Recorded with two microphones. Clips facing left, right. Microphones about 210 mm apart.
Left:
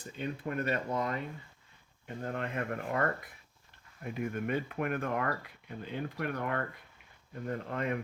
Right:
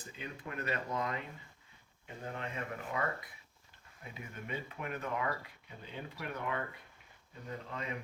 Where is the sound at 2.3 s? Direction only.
60° left (ahead or behind).